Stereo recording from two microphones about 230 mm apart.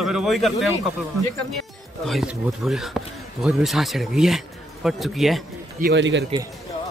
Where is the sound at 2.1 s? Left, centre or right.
Centre.